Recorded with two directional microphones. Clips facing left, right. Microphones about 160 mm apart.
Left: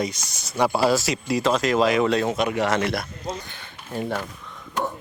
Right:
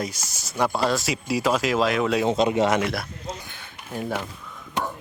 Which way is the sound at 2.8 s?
5° right (ahead or behind).